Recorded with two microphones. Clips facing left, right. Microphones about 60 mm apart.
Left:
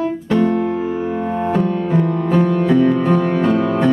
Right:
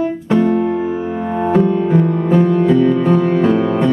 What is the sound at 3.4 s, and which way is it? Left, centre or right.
Music, right.